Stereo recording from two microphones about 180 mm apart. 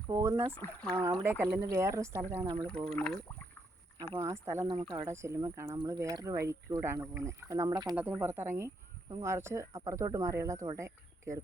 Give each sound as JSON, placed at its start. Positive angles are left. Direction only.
{"t": 0.1, "sound": "speech", "side_deg": -15}
{"t": 0.5, "sound": "speech", "side_deg": 5}
{"t": 1.2, "sound": "speech", "side_deg": -15}
{"t": 2.6, "sound": "speech", "side_deg": 5}
{"t": 4.2, "sound": "speech", "side_deg": -15}
{"t": 7.9, "sound": "speech", "side_deg": -10}